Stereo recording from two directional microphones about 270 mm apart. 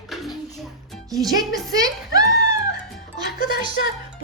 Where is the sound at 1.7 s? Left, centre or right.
Centre.